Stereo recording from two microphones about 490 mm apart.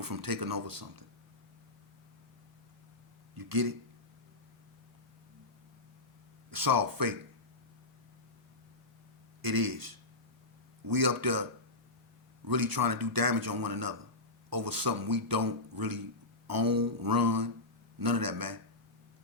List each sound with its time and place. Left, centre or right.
0.0 s speech: right
3.3 s speech: right
6.5 s speech: right
9.4 s speech: right
12.5 s speech: right